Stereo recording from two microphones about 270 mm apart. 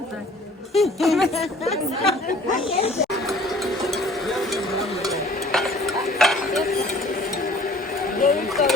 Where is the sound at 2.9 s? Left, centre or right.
Centre.